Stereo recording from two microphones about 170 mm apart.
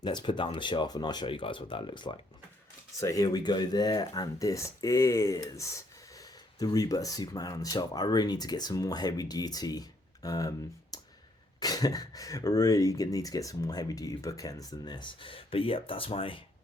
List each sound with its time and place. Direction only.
0.0 s speech: 25° left (ahead or behind)
10.9 s clicking: 20° left (ahead or behind)
11.6 s speech: 20° left (ahead or behind)